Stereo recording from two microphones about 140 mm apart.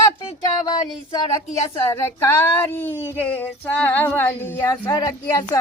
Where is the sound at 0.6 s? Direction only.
30° left (ahead or behind).